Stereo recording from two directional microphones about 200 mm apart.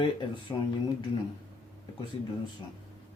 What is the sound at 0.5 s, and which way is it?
Speech, 10° left (ahead or behind).